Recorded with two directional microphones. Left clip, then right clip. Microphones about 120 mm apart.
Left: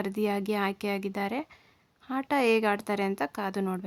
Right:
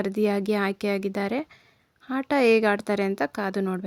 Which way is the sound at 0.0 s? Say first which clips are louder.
Right 5 dB; 30° right (ahead or behind).